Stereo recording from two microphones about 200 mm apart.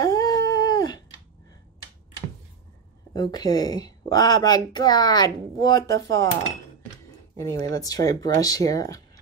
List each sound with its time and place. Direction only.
0.0 s dog: 20° left (ahead or behind)
3.1 s a woman's voice: 20° left (ahead or behind)
5.9 s cutlery: 65° right (ahead or behind)
7.3 s speech: 15° left (ahead or behind)